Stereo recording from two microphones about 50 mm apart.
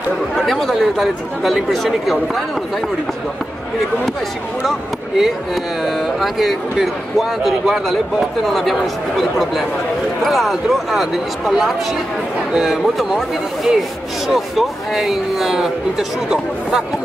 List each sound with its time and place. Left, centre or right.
0.4 s speech: centre
4.6 s speech: centre